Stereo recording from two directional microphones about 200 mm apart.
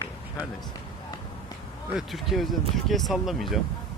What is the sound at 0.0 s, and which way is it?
Run, 15° left (ahead or behind).